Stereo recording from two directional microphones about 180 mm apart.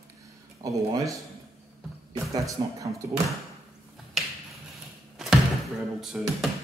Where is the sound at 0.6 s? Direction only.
20° right (ahead or behind).